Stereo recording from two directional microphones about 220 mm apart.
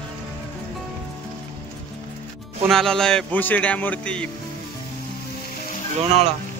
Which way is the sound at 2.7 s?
Centre (ahead or behind).